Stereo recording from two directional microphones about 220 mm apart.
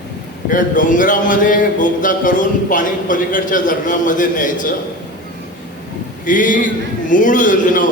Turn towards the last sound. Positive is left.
turn(degrees=35)  # may be behind; listen again after turning